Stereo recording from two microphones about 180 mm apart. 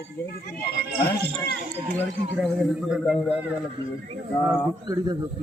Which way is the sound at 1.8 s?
45° right (ahead or behind).